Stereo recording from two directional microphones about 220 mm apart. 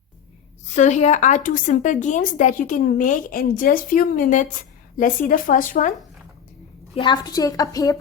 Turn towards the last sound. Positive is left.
turn(degrees=15)  # may be behind; listen again after turning